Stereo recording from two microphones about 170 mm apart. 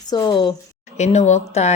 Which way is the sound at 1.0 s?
40° left (ahead or behind).